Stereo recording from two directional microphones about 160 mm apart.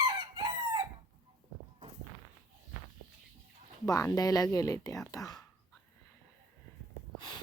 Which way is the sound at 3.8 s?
20° left (ahead or behind).